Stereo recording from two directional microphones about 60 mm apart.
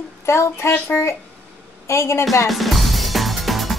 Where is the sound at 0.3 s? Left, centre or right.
Left.